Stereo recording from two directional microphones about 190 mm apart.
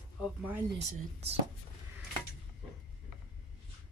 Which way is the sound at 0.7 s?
30° right (ahead or behind).